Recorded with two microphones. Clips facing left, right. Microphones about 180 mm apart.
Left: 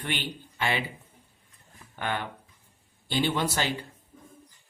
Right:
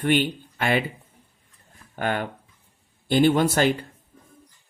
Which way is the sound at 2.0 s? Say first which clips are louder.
Right 6 dB; 45° right (ahead or behind).